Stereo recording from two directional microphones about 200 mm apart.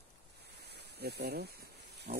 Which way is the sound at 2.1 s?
40° right (ahead or behind).